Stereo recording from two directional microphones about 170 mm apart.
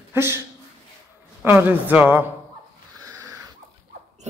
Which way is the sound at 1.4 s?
10° right (ahead or behind).